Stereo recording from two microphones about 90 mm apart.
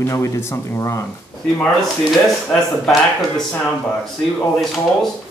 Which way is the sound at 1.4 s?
15° left (ahead or behind).